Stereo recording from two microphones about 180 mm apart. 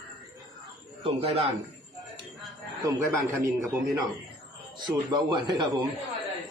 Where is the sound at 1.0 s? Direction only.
30° right (ahead or behind).